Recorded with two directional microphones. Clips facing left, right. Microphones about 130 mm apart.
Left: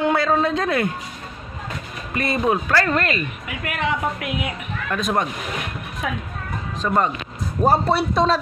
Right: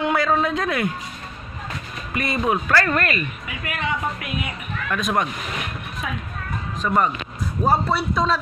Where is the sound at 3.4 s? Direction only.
70° left (ahead or behind).